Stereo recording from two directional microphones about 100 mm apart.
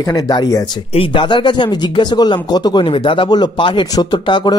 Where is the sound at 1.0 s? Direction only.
55° left (ahead or behind).